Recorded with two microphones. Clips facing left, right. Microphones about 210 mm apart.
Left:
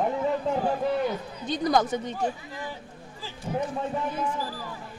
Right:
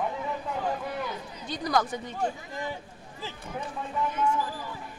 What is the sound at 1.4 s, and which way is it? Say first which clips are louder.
Speech: left 4 dB; 20° left (ahead or behind).